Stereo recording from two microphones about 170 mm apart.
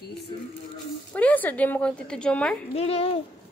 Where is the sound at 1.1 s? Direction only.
10° left (ahead or behind).